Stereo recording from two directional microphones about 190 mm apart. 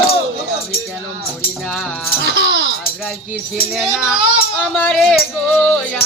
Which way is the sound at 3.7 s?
Centre (ahead or behind).